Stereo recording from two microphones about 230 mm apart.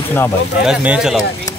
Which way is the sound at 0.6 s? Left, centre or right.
Centre.